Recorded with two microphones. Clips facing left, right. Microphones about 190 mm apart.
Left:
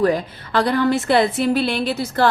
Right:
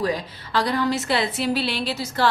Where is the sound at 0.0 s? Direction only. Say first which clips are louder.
Left 7 dB; 55° left (ahead or behind).